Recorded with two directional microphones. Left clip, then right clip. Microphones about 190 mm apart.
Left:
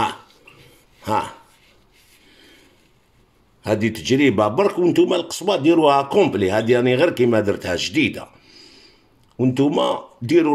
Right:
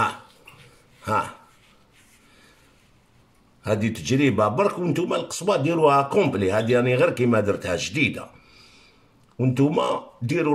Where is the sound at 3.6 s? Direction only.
40° left (ahead or behind).